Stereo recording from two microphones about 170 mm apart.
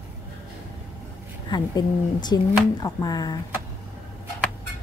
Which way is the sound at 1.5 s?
25° left (ahead or behind).